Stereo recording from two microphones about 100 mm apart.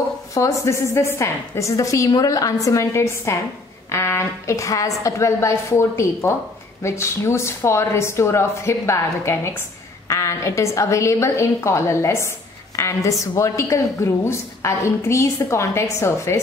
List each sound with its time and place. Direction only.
0.3 s a woman's voice: 30° left (ahead or behind)